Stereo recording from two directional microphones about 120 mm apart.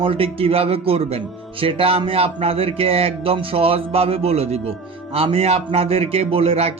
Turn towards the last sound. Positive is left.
turn(degrees=-55)  # may be behind; listen again after turning